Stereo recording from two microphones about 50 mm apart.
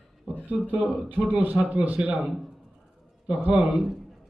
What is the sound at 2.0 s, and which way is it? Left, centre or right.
Speech, centre.